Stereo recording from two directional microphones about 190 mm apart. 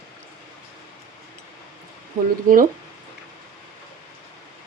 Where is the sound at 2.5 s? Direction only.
50° right (ahead or behind).